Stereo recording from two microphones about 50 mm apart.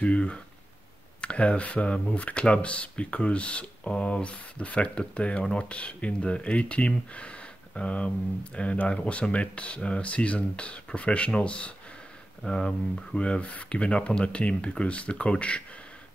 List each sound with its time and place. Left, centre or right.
0.0 s speech: left